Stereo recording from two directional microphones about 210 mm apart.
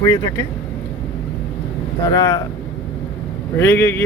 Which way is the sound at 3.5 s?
10° left (ahead or behind).